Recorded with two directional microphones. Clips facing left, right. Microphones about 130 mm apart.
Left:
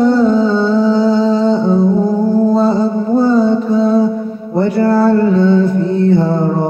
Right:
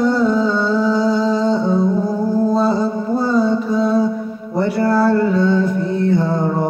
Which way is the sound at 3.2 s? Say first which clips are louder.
Left 5 dB; 25° left (ahead or behind).